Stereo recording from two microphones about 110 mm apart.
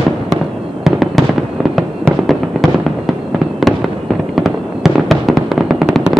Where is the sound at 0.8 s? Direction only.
Centre (ahead or behind).